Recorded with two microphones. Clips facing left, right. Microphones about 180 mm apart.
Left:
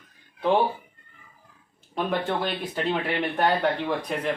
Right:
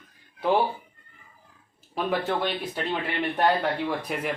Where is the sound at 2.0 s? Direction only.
Centre (ahead or behind).